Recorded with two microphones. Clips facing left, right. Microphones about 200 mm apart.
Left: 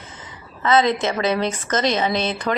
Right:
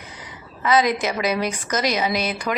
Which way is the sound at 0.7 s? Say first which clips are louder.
Left 2 dB; 25° left (ahead or behind).